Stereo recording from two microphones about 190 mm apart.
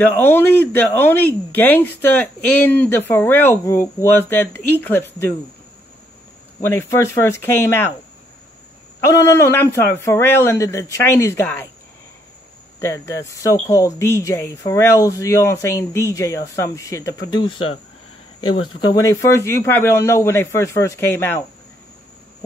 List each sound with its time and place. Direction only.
0.0 s speech: 10° left (ahead or behind)
6.7 s speech: 15° left (ahead or behind)
9.1 s speech: 15° left (ahead or behind)
12.8 s speech: 15° left (ahead or behind)
18.8 s speech: 20° left (ahead or behind)